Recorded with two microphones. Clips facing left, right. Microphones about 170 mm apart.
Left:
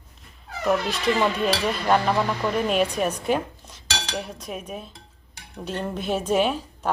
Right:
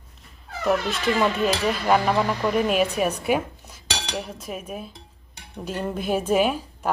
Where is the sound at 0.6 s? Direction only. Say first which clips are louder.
Even; centre (ahead or behind).